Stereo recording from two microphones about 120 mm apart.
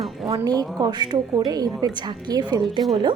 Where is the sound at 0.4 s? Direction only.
30° right (ahead or behind).